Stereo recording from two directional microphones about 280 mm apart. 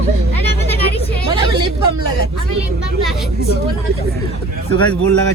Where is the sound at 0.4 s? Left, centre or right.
Left.